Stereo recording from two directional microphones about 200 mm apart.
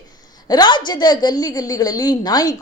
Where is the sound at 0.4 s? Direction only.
20° left (ahead or behind).